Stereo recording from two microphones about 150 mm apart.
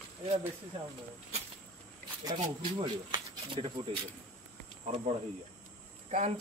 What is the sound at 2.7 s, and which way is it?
Speech, 35° right (ahead or behind).